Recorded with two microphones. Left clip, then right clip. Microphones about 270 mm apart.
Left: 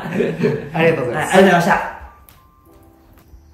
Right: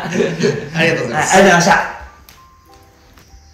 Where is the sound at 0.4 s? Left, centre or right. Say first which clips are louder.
Right 1 dB; left.